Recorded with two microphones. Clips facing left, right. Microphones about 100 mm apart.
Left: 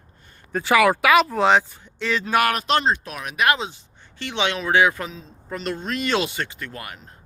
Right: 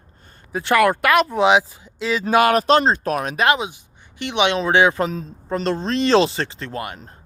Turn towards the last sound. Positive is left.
turn(degrees=-30)  # may be behind; listen again after turning